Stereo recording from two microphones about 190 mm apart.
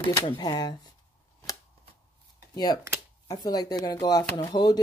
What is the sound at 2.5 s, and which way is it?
Speech, 20° left (ahead or behind).